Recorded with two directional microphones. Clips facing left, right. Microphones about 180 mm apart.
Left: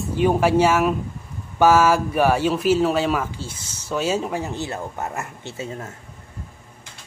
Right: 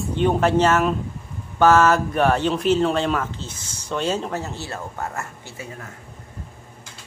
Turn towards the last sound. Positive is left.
turn(degrees=25)  # may be behind; listen again after turning